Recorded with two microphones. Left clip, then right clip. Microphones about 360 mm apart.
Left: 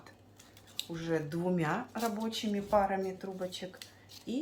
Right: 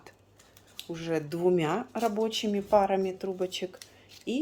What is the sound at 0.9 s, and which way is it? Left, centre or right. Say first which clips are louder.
Speech: right 3 dB; right.